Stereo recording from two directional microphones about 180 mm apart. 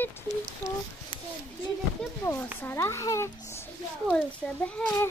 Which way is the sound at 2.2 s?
10° left (ahead or behind).